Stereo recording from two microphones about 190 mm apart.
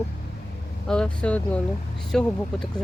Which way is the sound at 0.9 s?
5° left (ahead or behind).